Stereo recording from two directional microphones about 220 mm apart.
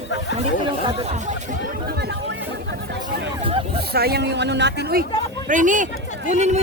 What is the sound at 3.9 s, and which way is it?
Speech, 45° right (ahead or behind).